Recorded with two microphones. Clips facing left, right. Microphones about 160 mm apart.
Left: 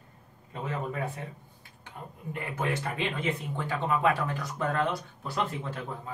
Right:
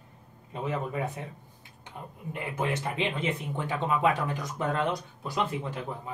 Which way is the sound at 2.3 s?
20° right (ahead or behind).